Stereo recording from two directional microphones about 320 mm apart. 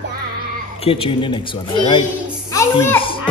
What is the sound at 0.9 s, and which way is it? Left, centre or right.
A child's voice, centre.